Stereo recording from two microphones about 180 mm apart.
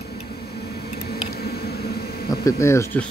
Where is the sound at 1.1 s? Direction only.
60° left (ahead or behind).